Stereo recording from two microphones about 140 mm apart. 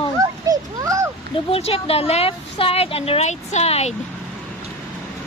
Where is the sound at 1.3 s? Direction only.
45° left (ahead or behind).